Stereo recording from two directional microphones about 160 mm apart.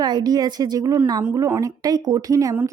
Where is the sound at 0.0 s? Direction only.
25° right (ahead or behind).